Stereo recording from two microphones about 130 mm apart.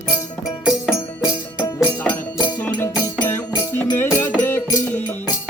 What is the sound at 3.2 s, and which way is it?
Music, 20° left (ahead or behind).